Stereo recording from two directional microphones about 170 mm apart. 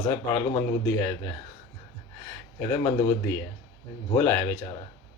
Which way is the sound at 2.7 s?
20° left (ahead or behind).